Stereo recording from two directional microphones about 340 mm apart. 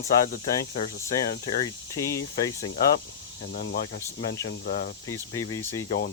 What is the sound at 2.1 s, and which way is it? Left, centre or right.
Speech, centre.